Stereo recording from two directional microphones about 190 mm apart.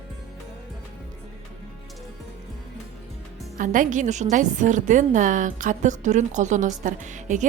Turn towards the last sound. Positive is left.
turn(degrees=-40)  # may be behind; listen again after turning